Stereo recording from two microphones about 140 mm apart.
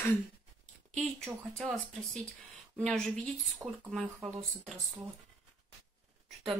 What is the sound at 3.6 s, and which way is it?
Speech, 20° right (ahead or behind).